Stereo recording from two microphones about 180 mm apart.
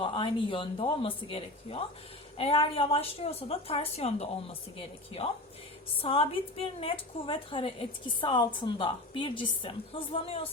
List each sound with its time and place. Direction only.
0.0 s a woman's voice: 30° left (ahead or behind)